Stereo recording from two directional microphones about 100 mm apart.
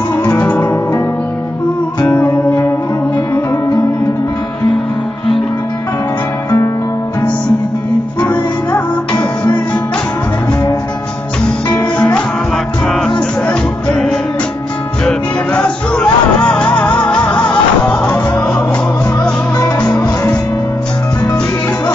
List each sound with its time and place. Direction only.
0.4 s music: 15° left (ahead or behind)
2.0 s music: 20° left (ahead or behind)
11.7 s music: 10° left (ahead or behind)
13.5 s music: 10° left (ahead or behind)